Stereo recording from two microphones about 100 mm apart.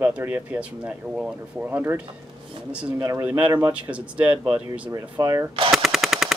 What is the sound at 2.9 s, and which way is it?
Speech, 35° right (ahead or behind).